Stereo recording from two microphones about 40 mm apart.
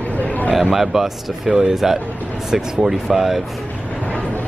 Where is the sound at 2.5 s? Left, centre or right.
Centre.